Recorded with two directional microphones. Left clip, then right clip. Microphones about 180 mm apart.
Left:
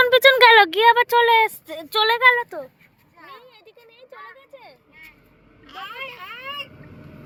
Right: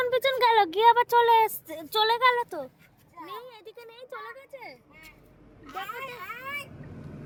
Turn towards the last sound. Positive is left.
turn(degrees=-40)  # may be behind; listen again after turning